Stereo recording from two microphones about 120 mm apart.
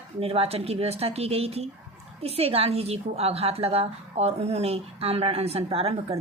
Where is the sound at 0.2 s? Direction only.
55° right (ahead or behind).